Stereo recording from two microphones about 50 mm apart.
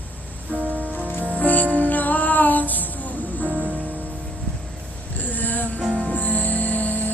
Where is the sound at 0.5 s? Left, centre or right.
Right.